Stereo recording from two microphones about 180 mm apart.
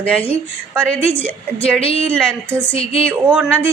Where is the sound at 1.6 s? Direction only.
30° left (ahead or behind).